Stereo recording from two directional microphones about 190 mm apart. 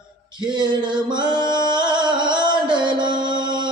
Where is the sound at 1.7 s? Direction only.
25° right (ahead or behind).